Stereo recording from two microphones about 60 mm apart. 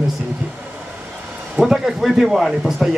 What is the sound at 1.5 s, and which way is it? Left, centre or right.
Speech, centre.